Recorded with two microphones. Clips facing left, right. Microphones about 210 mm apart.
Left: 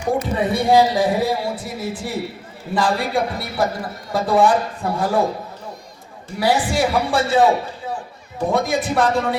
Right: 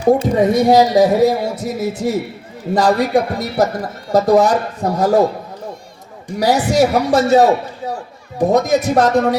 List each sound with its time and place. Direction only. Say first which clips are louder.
0.0 s speech: right 7 dB; 40° right (ahead or behind)
6.4 s speech: right 5 dB; 40° right (ahead or behind)